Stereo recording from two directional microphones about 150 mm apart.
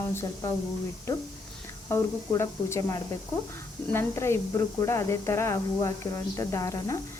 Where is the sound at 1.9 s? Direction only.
20° left (ahead or behind).